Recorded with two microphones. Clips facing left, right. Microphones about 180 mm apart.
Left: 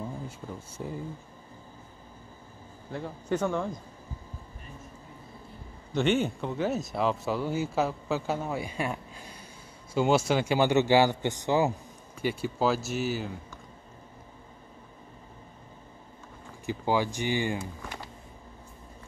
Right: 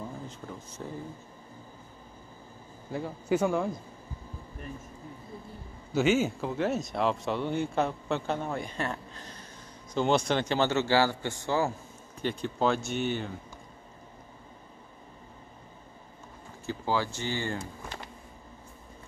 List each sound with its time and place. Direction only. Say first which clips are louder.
0.5 s speech: left 2 dB; 10° left (ahead or behind)
2.9 s a man's voice: right 2 dB; 5° right (ahead or behind)
5.9 s speech: right 1 dB; 5° right (ahead or behind)
16.6 s speech: left 3 dB; 15° left (ahead or behind)